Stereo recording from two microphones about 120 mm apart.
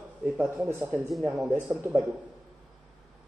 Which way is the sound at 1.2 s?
5° right (ahead or behind).